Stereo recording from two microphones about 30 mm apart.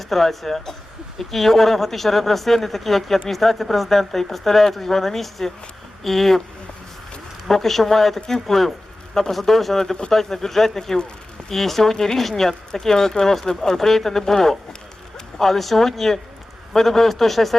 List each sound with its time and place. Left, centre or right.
0.0 s speech: centre
7.4 s speech: centre